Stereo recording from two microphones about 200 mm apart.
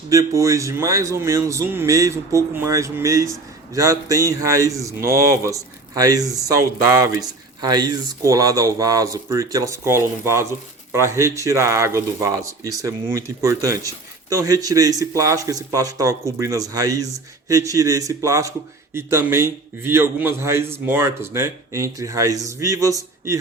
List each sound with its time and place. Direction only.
0.1 s speech: 15° right (ahead or behind)